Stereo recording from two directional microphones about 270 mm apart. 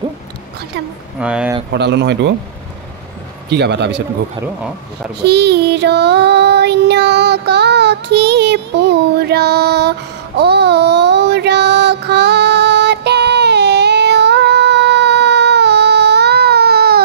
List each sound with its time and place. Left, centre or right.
1.2 s speech: centre
1.7 s speech: right
3.4 s speech: right
5.2 s child singing: right